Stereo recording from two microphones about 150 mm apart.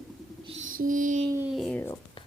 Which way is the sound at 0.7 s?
65° right (ahead or behind).